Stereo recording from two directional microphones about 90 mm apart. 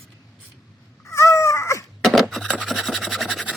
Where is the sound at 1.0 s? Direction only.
35° left (ahead or behind).